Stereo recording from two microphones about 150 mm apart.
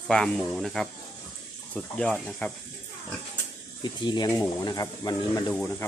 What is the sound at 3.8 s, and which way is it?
Speech, 30° left (ahead or behind).